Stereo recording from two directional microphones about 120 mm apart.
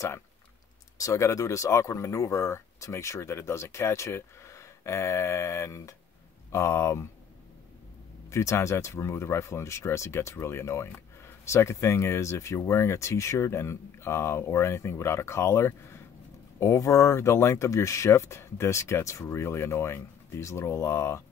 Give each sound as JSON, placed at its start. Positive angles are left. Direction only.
{"t": 0.9, "sound": "speech", "side_deg": 25}
{"t": 8.3, "sound": "speech", "side_deg": 25}